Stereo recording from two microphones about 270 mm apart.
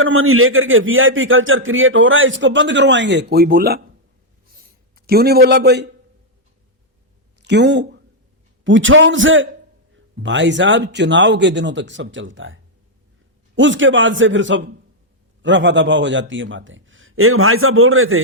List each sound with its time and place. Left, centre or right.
0.0 s a man's voice: right
4.9 s speech: right
7.4 s a man's voice: right
13.6 s a man's voice: right